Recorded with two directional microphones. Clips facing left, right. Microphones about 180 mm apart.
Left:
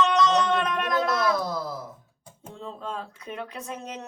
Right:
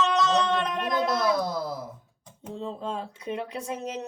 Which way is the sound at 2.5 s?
30° right (ahead or behind).